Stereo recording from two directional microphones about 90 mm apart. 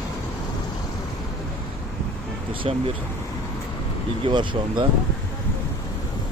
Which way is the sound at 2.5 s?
85° right.